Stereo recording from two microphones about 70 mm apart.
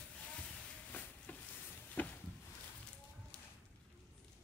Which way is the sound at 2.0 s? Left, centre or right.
Left.